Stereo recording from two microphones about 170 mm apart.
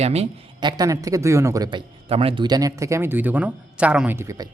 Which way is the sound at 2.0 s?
35° right (ahead or behind).